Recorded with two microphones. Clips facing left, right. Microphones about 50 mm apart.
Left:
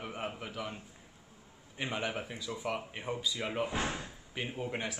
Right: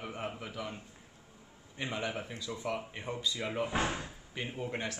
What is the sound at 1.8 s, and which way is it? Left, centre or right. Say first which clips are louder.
Speech: left 1 dB; centre.